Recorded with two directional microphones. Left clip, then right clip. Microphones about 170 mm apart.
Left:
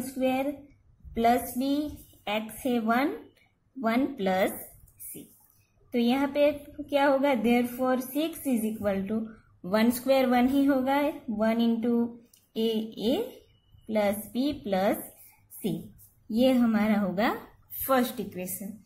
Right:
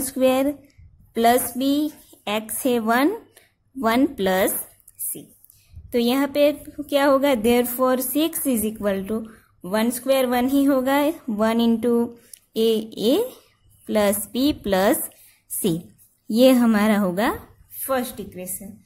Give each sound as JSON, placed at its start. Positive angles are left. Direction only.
{"t": 0.2, "sound": "a woman's voice", "side_deg": -50}
{"t": 5.9, "sound": "a woman's voice", "side_deg": -50}
{"t": 9.6, "sound": "a woman's voice", "side_deg": -30}
{"t": 16.3, "sound": "a woman's voice", "side_deg": -45}
{"t": 17.7, "sound": "speech", "side_deg": -15}